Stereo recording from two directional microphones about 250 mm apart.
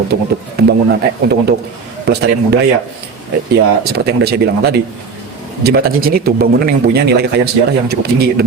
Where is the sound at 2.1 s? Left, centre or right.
Right.